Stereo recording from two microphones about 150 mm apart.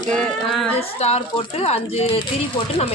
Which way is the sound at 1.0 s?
40° left (ahead or behind).